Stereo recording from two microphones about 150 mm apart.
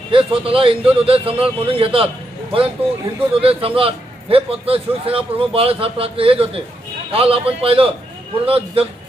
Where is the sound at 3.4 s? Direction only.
40° right (ahead or behind).